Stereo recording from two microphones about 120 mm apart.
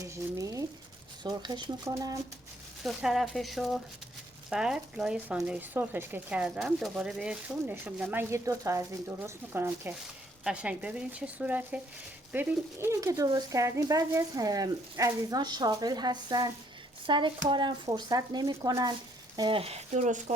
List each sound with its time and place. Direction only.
0.0 s a sound: 25° right (ahead or behind)
1.2 s speech: 35° right (ahead or behind)
2.8 s speech: centre (ahead or behind); by 18.9 s 35° right (ahead or behind)
19.4 s speech: 45° right (ahead or behind); by 20.3 s 85° right